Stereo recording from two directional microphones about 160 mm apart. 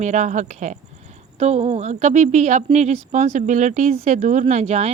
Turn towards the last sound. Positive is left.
turn(degrees=-45)  # may be behind; listen again after turning